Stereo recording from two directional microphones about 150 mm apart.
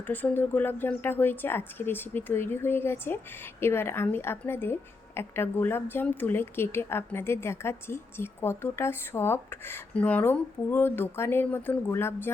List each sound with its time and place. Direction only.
0.1 s a woman's voice: 10° left (ahead or behind)